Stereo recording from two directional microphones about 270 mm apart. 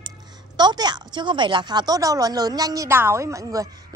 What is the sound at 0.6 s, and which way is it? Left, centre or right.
A woman's voice, centre.